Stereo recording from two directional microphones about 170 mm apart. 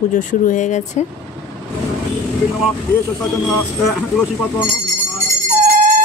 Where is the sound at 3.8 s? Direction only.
Centre (ahead or behind).